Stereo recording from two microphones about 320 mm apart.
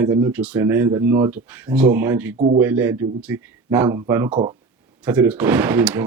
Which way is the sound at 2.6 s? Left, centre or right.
Centre.